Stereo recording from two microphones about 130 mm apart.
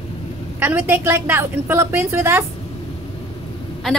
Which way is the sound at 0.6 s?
15° right (ahead or behind).